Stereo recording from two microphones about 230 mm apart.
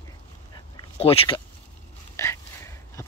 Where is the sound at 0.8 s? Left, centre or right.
Left.